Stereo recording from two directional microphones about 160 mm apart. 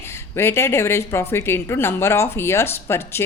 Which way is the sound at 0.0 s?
15° left (ahead or behind).